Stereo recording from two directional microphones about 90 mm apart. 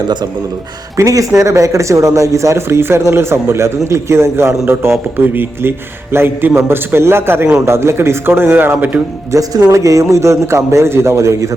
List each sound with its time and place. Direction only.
0.9 s a man's voice: 40° right (ahead or behind); by 9.0 s 20° right (ahead or behind)
9.3 s a man's voice: 40° right (ahead or behind)